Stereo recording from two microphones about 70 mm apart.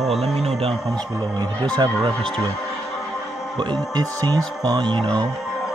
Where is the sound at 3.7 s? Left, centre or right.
Right.